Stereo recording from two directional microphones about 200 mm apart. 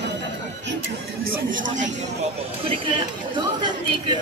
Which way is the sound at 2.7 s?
25° right (ahead or behind).